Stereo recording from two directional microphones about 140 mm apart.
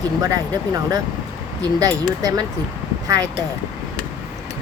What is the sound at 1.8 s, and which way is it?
Speech, 25° right (ahead or behind).